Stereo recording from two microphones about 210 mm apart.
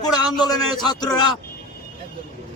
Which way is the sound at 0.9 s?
20° left (ahead or behind).